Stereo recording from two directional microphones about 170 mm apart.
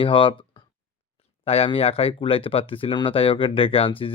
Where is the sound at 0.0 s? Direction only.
30° left (ahead or behind).